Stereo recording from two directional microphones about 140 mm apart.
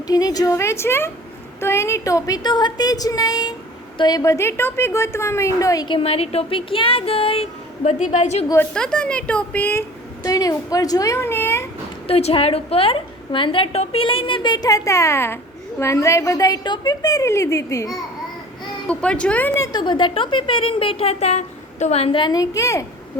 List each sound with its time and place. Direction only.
0.1 s a woman's voice: 25° left (ahead or behind)
6.0 s a woman's voice: 45° left (ahead or behind)
7.9 s a woman's voice: 60° left (ahead or behind)
8.7 s speech: 5° left (ahead or behind)
10.2 s a woman's voice: 25° left (ahead or behind)
12.0 s a woman's voice: 45° left (ahead or behind); by 17.9 s 20° left (ahead or behind)
18.9 s speech: 10° left (ahead or behind)
19.6 s a woman's voice: 30° left (ahead or behind)